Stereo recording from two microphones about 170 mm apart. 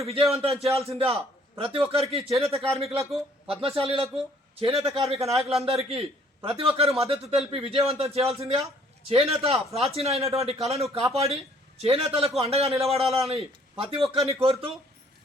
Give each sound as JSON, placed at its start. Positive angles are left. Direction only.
{"t": 0.0, "sound": "speech", "side_deg": -35}